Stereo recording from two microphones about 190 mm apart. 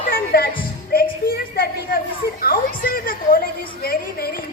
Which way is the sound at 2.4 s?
50° left (ahead or behind).